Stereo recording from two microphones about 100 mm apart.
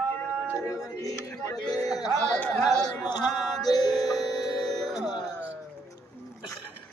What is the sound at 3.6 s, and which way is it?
Music, 45° left (ahead or behind).